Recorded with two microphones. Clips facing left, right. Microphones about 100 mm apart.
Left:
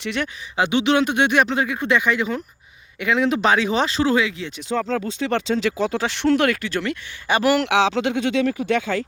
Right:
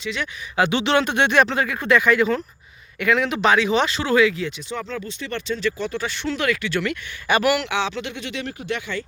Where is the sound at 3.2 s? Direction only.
35° left (ahead or behind).